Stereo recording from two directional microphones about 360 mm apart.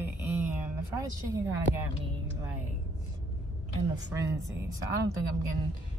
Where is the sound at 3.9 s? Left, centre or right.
Centre.